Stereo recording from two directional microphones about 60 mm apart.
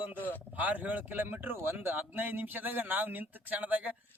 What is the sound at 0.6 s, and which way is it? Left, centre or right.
A man's voice, right.